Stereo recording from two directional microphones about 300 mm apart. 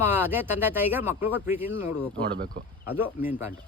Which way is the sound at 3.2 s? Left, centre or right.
Centre.